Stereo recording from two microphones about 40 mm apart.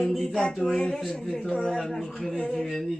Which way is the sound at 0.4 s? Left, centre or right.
Centre.